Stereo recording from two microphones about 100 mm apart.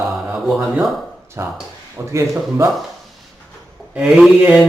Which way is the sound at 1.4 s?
25° right (ahead or behind).